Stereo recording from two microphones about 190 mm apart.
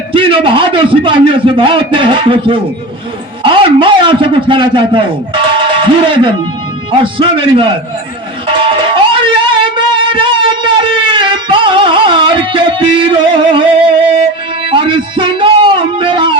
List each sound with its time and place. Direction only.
0.1 s a man's voice: 25° right (ahead or behind)
8.4 s music: 25° right (ahead or behind)
14.7 s a sound: 25° right (ahead or behind)